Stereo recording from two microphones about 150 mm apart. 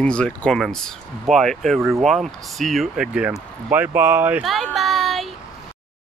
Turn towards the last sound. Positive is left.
turn(degrees=0)  # may be behind; listen again after turning